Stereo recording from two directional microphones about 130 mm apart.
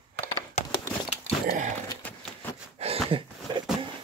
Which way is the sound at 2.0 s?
10° left (ahead or behind).